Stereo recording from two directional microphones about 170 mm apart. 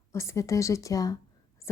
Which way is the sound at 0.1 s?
15° left (ahead or behind).